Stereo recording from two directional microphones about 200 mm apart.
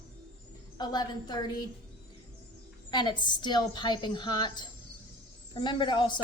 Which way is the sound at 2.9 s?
20° left (ahead or behind).